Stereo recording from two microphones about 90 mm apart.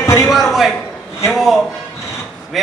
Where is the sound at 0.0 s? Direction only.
30° left (ahead or behind).